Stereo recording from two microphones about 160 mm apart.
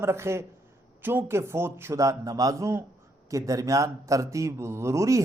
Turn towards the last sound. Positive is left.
turn(degrees=-20)  # may be behind; listen again after turning